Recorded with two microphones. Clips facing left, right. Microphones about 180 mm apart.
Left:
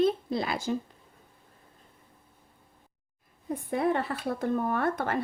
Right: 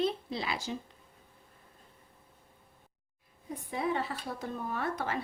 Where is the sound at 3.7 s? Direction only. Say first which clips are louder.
Left 5 dB; 55° left (ahead or behind).